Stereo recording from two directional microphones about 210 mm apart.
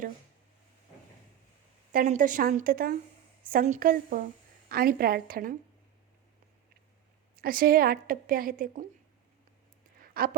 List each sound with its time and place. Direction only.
1.9 s a woman's voice: 40° right (ahead or behind)
7.3 s a woman's voice: 45° right (ahead or behind)
10.0 s a sound: 45° right (ahead or behind)